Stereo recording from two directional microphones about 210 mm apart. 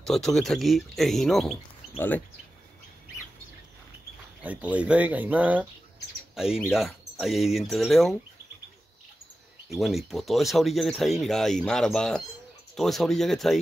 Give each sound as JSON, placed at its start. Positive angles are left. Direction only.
{"t": 0.0, "sound": "speech", "side_deg": 0}
{"t": 4.4, "sound": "speech", "side_deg": -5}
{"t": 9.7, "sound": "speech", "side_deg": 0}